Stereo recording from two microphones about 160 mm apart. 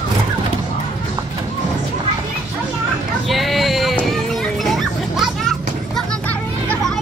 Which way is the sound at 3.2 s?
Centre (ahead or behind).